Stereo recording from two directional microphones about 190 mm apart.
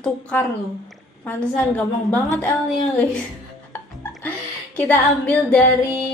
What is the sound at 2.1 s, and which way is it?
Speech, 10° left (ahead or behind).